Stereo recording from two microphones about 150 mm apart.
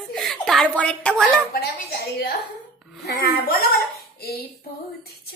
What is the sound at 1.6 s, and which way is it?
A woman's voice, 90° left.